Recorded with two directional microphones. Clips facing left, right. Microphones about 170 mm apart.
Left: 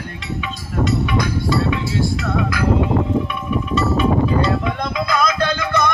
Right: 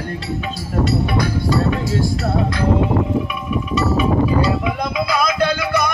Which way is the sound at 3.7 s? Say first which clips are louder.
Even; 5° right (ahead or behind).